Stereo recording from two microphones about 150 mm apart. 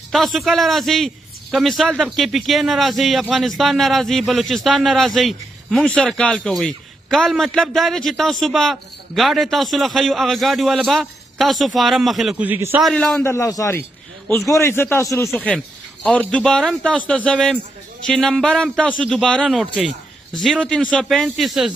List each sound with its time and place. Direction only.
0.1 s a man's voice: centre (ahead or behind)
12.4 s a man's voice: 10° right (ahead or behind)
12.8 s a man's voice: 5° left (ahead or behind)
15.4 s a man's voice: 5° left (ahead or behind)